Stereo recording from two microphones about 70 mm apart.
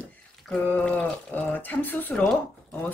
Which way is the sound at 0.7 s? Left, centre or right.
Left.